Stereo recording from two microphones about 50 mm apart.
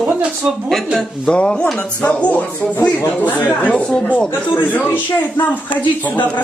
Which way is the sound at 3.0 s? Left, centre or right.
Left.